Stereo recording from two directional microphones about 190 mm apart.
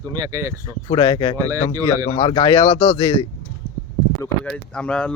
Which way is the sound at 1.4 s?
20° right (ahead or behind).